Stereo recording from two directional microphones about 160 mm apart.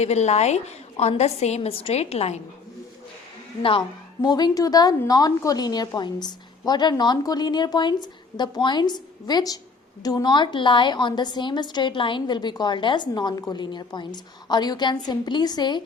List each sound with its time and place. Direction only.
0.0 s a woman's voice: 45° left (ahead or behind)
3.6 s a woman's voice: 35° left (ahead or behind)